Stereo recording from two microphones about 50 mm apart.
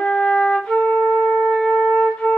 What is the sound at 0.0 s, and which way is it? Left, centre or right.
Flute, centre.